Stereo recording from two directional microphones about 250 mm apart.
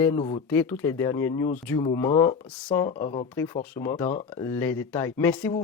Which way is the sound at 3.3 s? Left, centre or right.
Centre.